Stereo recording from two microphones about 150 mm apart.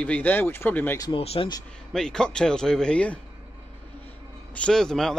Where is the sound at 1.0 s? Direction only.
35° left (ahead or behind).